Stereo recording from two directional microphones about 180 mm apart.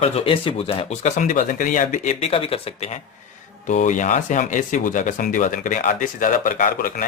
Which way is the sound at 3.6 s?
45° left (ahead or behind).